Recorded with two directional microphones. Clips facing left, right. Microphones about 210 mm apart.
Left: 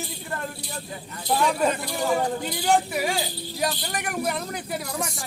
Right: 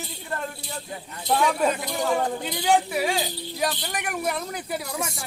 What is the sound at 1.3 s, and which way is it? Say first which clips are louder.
Speech: even; centre (ahead or behind).